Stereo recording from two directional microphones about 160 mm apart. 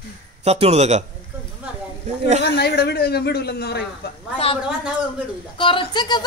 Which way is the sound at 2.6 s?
80° left.